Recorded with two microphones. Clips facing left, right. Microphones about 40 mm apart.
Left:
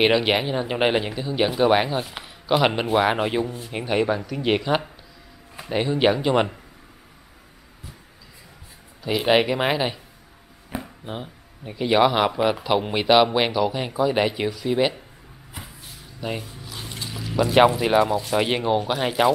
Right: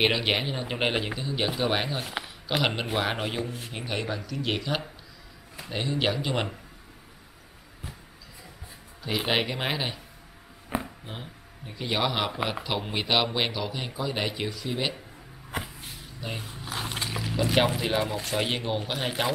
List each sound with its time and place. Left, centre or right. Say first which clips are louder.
0.0 s speech: left 6 dB; centre
9.0 s speech: left 7 dB; centre
10.7 s a sound: right 1 dB; centre
11.1 s speech: left 7 dB; centre
16.4 s a sound: right 3 dB; right
17.4 s speech: left 7 dB; centre
17.7 s speech: left 8 dB; centre